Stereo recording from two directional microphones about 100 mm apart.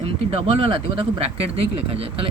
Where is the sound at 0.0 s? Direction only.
80° right.